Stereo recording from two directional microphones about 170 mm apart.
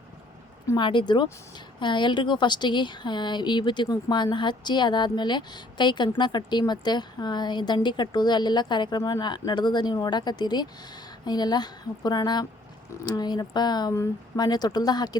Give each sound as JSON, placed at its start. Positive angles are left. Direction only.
{"t": 0.7, "sound": "speech", "side_deg": 30}